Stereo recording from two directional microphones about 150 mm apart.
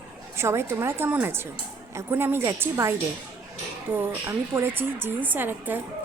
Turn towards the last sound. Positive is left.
turn(degrees=-15)  # may be behind; listen again after turning